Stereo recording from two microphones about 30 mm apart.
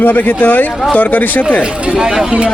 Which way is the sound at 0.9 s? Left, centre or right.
Left.